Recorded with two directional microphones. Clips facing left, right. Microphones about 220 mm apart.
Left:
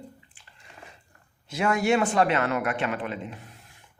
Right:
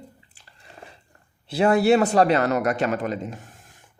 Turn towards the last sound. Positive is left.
turn(degrees=-45)  # may be behind; listen again after turning